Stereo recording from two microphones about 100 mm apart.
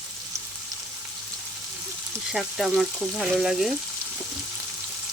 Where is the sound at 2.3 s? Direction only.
5° right (ahead or behind).